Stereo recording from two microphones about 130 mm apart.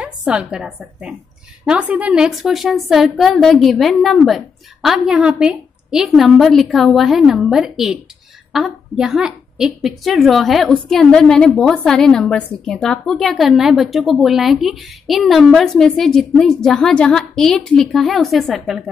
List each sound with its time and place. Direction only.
0.0 s a woman's voice: 10° right (ahead or behind)